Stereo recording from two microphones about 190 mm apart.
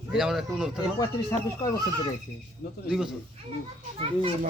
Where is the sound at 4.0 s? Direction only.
30° right (ahead or behind).